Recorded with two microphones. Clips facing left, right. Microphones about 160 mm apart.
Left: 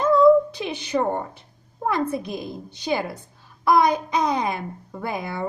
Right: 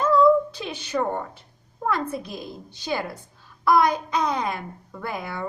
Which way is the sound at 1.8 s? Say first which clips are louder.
Left 3 dB; 15° left (ahead or behind).